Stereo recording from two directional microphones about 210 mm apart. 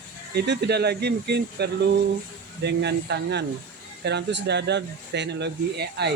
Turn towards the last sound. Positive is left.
turn(degrees=-50)  # may be behind; listen again after turning